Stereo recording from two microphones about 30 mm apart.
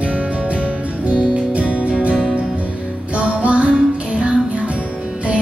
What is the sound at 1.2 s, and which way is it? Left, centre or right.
Music, right.